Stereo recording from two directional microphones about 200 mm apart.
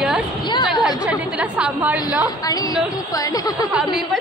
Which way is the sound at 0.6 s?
5° right (ahead or behind).